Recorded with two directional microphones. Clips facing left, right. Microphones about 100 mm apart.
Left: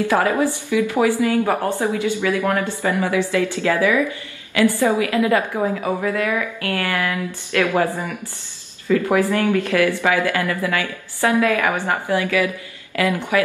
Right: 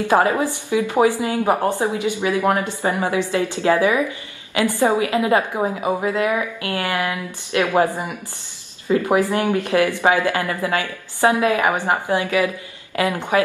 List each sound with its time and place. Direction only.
0.0 s speech: 20° right (ahead or behind)